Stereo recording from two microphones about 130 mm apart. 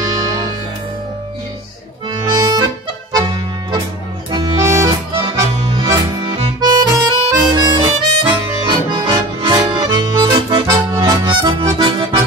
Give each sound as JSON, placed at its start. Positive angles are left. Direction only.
{"t": 0.0, "sound": "music", "side_deg": -30}
{"t": 2.0, "sound": "accordion", "side_deg": -35}
{"t": 4.6, "sound": "accordion", "side_deg": -25}
{"t": 6.6, "sound": "harmonica", "side_deg": -35}
{"t": 8.2, "sound": "accordion", "side_deg": -35}